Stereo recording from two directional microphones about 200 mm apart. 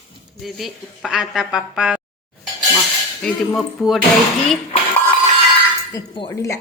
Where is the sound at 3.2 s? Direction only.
Centre (ahead or behind).